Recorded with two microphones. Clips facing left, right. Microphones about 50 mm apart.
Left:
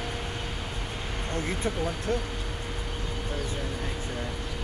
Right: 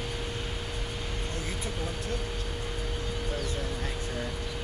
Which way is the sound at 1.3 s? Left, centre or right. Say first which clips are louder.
Left 10 dB; left.